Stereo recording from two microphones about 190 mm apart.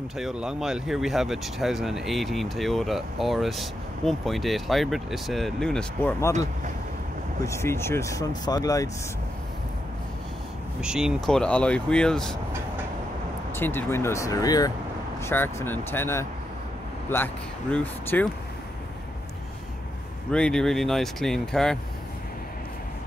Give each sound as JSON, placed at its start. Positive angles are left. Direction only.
{"t": 0.2, "sound": "speech", "side_deg": -5}
{"t": 6.3, "sound": "speech", "side_deg": -40}
{"t": 7.4, "sound": "speech", "side_deg": 15}
{"t": 10.8, "sound": "speech", "side_deg": -5}
{"t": 13.6, "sound": "speech", "side_deg": 10}
{"t": 20.2, "sound": "speech", "side_deg": 5}